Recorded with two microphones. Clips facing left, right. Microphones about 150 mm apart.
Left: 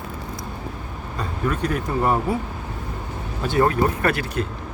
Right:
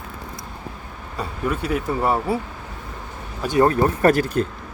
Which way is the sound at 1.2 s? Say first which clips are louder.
Left 1 dB; 5° right (ahead or behind).